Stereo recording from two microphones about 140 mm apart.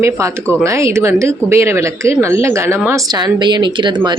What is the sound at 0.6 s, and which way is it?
Speech, 20° right (ahead or behind).